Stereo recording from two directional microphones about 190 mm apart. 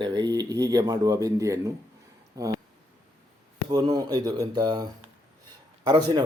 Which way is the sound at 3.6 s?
20° right (ahead or behind).